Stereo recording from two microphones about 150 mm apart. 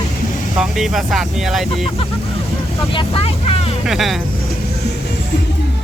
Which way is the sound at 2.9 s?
35° left (ahead or behind).